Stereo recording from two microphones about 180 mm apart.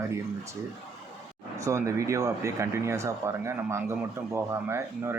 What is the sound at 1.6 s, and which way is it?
Speech, 15° right (ahead or behind).